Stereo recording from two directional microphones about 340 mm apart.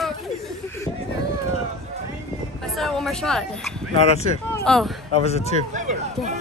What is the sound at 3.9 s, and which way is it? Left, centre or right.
Speech, centre.